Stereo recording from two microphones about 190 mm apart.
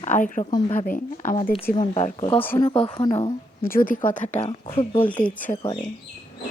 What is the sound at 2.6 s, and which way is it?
Speech, 25° left (ahead or behind).